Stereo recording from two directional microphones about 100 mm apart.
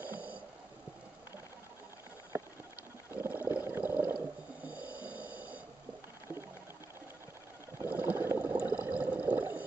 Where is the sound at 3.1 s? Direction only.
20° right (ahead or behind).